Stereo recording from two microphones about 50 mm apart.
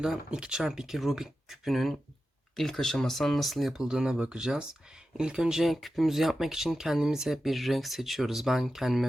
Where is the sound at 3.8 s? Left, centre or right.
Centre.